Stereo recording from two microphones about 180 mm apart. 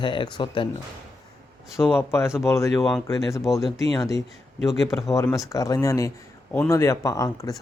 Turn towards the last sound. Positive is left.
turn(degrees=20)  # may be behind; listen again after turning